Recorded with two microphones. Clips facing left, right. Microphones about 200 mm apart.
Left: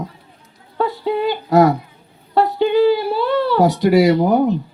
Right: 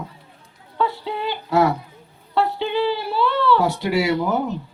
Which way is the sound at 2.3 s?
40° left (ahead or behind).